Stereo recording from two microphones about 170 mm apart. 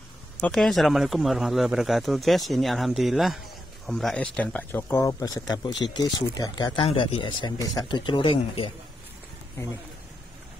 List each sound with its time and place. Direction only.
0.4 s speech: 5° left (ahead or behind); by 8.7 s 30° left (ahead or behind)